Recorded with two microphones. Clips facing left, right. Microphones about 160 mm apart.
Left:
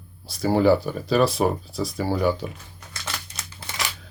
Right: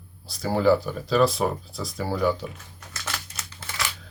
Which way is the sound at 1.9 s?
30° left (ahead or behind).